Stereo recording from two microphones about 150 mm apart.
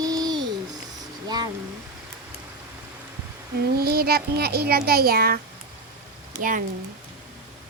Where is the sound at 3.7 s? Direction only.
90° right.